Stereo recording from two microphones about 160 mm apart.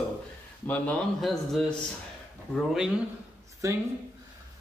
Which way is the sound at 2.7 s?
5° right (ahead or behind).